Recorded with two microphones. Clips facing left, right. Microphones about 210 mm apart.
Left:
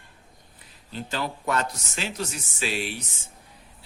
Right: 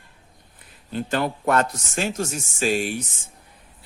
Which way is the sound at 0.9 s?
55° right (ahead or behind).